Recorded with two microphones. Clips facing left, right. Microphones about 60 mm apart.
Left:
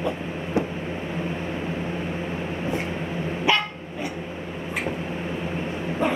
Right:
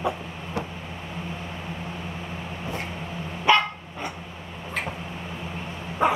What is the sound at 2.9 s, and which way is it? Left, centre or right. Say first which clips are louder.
Dog: left 6 dB; left.